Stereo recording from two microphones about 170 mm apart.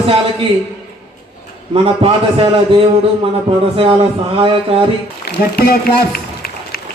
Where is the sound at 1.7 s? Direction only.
35° right (ahead or behind).